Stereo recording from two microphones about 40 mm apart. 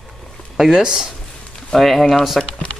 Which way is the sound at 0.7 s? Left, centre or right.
Centre.